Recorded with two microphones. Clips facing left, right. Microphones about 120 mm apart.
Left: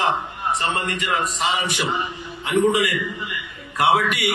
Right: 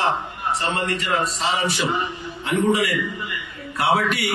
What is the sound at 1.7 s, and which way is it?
A man's voice, 20° left (ahead or behind).